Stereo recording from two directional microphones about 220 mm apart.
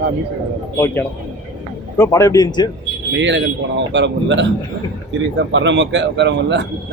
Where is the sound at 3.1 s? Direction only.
55° right (ahead or behind).